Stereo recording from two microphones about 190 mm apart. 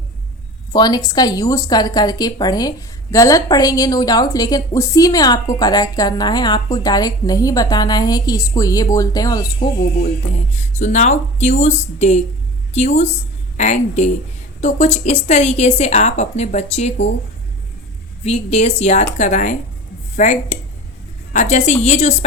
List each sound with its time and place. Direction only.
0.7 s a woman's voice: 20° left (ahead or behind)
10.5 s a woman's voice: 40° left (ahead or behind)
18.2 s a woman's voice: 35° left (ahead or behind)